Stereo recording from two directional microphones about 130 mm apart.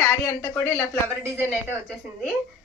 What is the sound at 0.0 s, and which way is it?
Speech, 20° left (ahead or behind).